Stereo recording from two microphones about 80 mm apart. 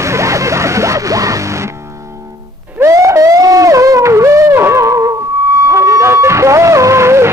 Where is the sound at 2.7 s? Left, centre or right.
Right.